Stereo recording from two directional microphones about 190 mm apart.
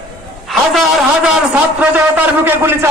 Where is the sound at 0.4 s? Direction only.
Centre (ahead or behind).